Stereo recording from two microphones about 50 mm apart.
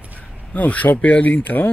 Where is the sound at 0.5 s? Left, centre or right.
Left.